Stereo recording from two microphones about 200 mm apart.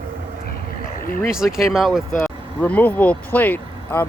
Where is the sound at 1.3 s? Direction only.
5° right (ahead or behind).